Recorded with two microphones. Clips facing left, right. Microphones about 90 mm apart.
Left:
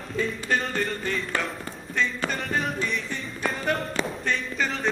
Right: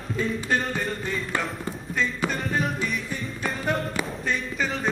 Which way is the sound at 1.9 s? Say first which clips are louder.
Even; 5° right (ahead or behind).